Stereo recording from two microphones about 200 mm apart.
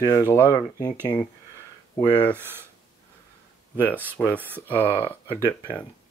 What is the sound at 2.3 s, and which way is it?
Speech, 10° right (ahead or behind).